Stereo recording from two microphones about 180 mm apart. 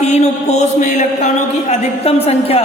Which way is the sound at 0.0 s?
35° left (ahead or behind).